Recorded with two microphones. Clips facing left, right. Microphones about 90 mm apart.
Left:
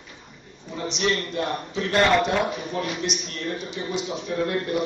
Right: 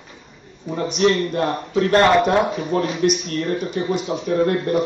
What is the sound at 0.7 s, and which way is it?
A man's voice, 45° right (ahead or behind).